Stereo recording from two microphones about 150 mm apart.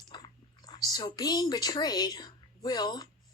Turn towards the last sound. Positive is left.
turn(degrees=25)  # may be behind; listen again after turning